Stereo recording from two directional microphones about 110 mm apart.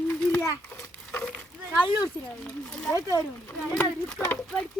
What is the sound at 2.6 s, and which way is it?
Speech, 5° left (ahead or behind).